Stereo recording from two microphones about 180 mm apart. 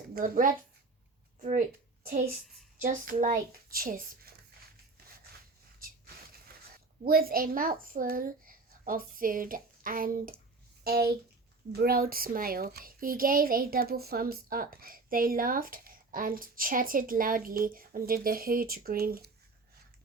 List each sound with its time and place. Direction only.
0.1 s a woman's voice: 50° right (ahead or behind)
2.0 s a child's voice: 55° right (ahead or behind)
6.7 s a child's voice: 55° right (ahead or behind)